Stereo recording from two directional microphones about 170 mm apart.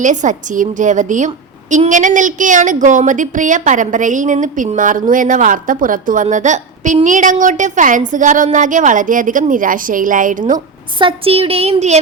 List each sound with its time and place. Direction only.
0.0 s a woman's voice: 45° right (ahead or behind)
10.9 s speech: 30° right (ahead or behind)